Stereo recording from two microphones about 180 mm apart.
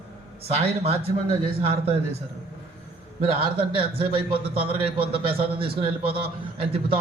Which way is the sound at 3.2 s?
30° right (ahead or behind).